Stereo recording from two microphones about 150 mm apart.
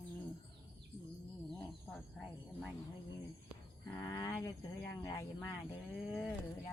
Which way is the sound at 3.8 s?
20° left (ahead or behind).